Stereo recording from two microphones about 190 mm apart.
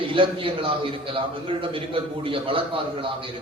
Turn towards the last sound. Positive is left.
turn(degrees=-25)  # may be behind; listen again after turning